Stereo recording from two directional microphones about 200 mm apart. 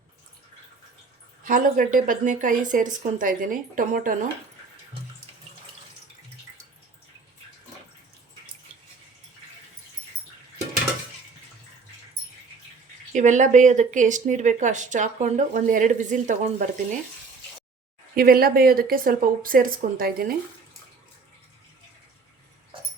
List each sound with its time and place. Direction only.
1.5 s a woman's voice: 40° right (ahead or behind)
13.1 s speech: 35° right (ahead or behind)
18.1 s a woman's voice: 50° right (ahead or behind)